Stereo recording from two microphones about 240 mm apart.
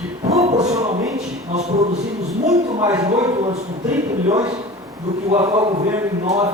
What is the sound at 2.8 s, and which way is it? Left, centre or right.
Speech, centre.